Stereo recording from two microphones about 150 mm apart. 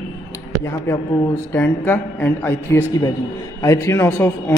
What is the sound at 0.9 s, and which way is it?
Speech, 15° left (ahead or behind).